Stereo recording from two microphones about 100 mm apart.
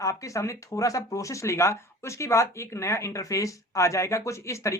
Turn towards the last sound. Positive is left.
turn(degrees=30)  # may be behind; listen again after turning